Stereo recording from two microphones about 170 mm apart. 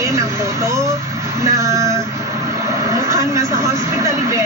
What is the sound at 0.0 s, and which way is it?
Vehicle, 20° right (ahead or behind).